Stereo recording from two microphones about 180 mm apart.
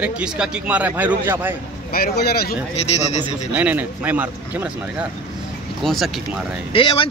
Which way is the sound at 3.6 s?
10° right (ahead or behind).